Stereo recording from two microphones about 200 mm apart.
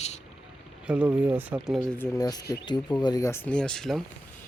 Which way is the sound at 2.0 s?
20° left (ahead or behind).